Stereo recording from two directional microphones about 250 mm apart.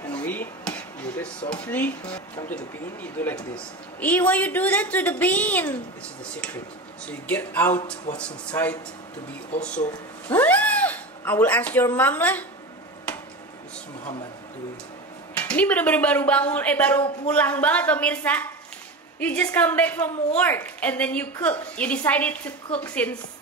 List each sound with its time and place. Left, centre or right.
0.1 s a sound: centre
1.5 s a woman's voice: centre
7.1 s a woman's voice: centre
10.3 s speech: centre
15.3 s a woman's voice: centre